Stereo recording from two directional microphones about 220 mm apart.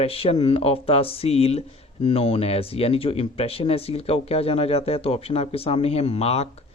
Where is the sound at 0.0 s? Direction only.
25° left (ahead or behind).